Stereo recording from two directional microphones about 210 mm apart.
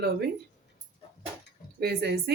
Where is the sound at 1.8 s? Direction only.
50° right (ahead or behind).